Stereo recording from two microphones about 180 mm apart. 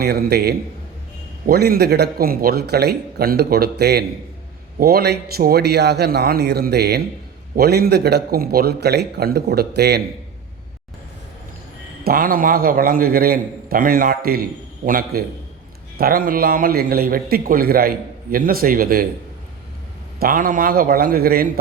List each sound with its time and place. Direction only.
0.0 s a man's voice: 60° right (ahead or behind)
12.0 s a man's voice: 55° right (ahead or behind)
20.1 s a man's voice: 55° right (ahead or behind)